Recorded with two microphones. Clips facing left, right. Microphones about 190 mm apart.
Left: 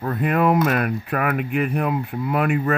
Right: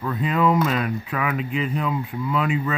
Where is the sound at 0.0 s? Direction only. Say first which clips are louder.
Left 2 dB; 55° left (ahead or behind).